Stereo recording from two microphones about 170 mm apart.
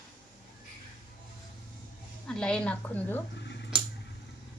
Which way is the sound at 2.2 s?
5° left (ahead or behind).